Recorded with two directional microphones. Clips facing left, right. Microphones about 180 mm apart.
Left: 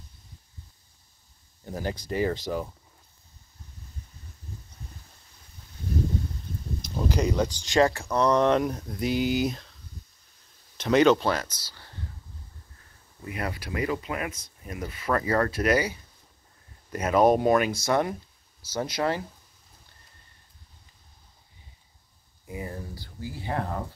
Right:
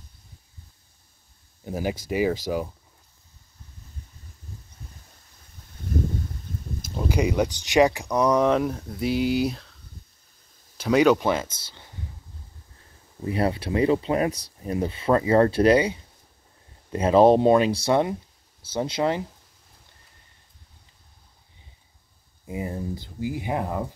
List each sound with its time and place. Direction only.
1.6 s speech: 10° right (ahead or behind)
7.1 s speech: 10° right (ahead or behind)
10.8 s speech: 10° right (ahead or behind)
13.2 s speech: 30° right (ahead or behind)
22.5 s speech: 20° right (ahead or behind)